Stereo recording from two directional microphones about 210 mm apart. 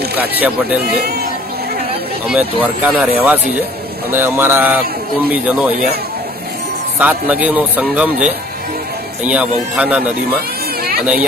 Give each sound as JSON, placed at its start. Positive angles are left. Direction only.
{"t": 0.2, "sound": "speech", "side_deg": -10}
{"t": 2.2, "sound": "a man's voice", "side_deg": -5}
{"t": 7.0, "sound": "speech", "side_deg": -5}
{"t": 10.8, "sound": "a sound", "side_deg": -45}